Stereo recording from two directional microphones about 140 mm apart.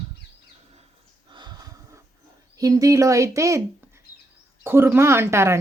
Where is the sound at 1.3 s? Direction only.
30° right (ahead or behind).